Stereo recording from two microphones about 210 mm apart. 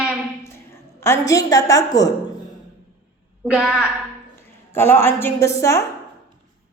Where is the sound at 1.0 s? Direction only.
15° left (ahead or behind).